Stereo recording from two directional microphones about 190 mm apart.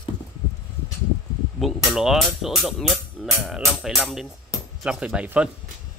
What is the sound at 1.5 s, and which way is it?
Speech, centre (ahead or behind).